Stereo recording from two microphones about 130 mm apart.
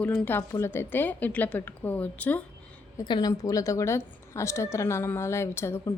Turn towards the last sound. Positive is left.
turn(degrees=20)  # may be behind; listen again after turning